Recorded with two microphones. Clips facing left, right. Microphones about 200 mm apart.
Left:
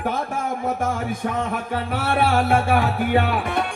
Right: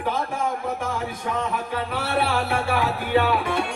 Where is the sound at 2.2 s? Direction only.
50° left (ahead or behind).